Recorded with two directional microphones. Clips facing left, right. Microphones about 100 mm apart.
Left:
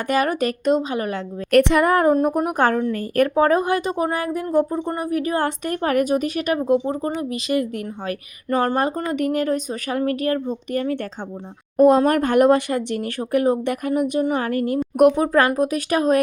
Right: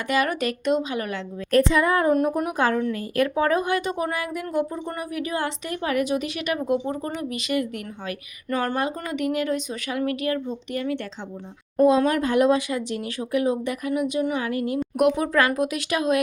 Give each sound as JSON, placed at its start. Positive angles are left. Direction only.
{"t": 0.1, "sound": "speech", "side_deg": 40}
{"t": 1.5, "sound": "a woman's voice", "side_deg": 70}